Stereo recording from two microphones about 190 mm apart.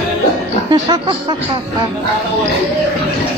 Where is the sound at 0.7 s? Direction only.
25° right (ahead or behind).